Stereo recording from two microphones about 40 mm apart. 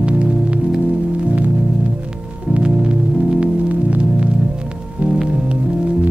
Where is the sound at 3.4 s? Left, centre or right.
Right.